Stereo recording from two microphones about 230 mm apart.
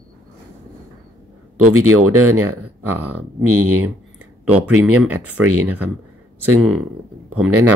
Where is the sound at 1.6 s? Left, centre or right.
Right.